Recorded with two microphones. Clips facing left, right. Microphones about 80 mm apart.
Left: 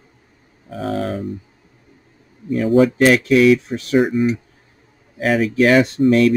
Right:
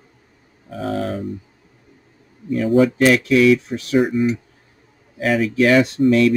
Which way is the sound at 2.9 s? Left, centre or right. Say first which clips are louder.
Left 1 dB; left.